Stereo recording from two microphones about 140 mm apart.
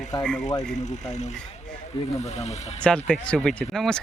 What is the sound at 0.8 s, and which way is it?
Speech, 55° left (ahead or behind).